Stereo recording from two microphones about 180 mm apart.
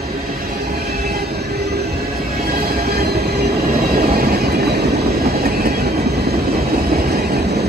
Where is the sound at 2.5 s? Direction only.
55° right (ahead or behind).